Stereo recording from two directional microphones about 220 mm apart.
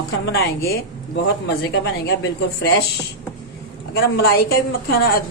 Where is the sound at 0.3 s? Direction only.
45° left (ahead or behind).